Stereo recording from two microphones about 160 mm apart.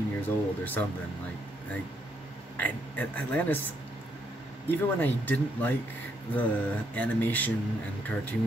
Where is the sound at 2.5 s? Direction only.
10° left (ahead or behind).